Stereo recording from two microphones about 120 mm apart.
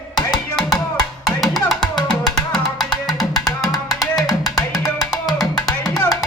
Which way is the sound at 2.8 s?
35° left (ahead or behind).